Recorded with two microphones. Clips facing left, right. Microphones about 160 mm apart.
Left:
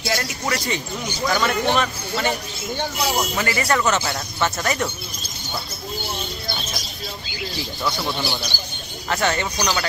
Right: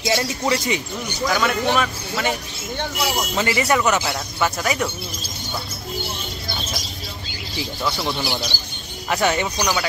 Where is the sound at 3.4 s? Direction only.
20° right (ahead or behind).